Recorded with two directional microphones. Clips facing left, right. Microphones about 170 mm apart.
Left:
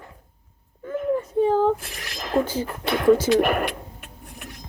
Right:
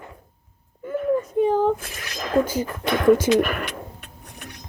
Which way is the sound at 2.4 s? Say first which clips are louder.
Right 2 dB; 45° right (ahead or behind).